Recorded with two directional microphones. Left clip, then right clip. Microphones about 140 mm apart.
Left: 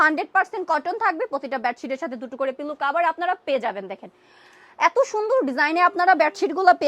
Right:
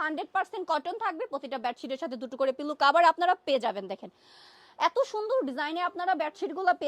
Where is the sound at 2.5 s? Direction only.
80° right.